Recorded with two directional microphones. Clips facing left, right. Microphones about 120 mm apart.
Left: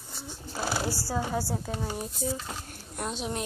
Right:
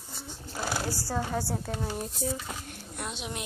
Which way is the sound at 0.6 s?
5° left (ahead or behind).